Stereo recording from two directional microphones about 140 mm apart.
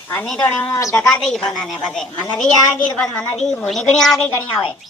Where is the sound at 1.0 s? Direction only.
5° left (ahead or behind).